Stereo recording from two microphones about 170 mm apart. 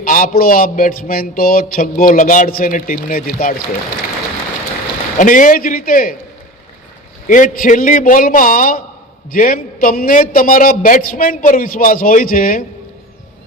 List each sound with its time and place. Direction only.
0.0 s a man's voice: 55° left (ahead or behind)
5.1 s a man's voice: 50° left (ahead or behind)
7.3 s a man's voice: 50° left (ahead or behind)